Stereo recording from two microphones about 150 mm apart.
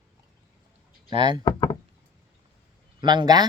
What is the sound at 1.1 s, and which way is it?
Speech, 30° right (ahead or behind).